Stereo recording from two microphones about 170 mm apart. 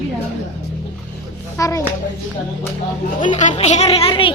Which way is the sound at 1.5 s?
20° left (ahead or behind).